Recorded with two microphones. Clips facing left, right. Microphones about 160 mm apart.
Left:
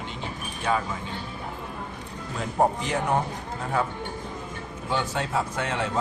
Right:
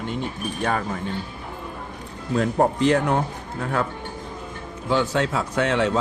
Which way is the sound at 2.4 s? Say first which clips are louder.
Right 4 dB; 65° right (ahead or behind).